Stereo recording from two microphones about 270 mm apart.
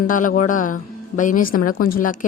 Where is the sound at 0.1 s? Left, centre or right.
Left.